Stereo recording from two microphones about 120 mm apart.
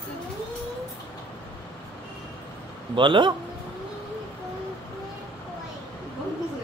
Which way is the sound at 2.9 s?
40° right (ahead or behind).